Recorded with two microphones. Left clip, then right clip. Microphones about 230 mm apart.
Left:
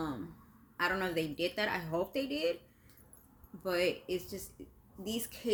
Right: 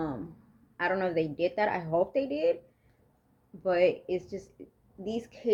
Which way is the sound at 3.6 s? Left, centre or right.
Centre.